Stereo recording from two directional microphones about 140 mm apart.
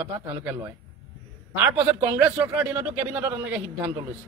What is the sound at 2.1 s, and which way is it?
A man's voice, 10° right (ahead or behind).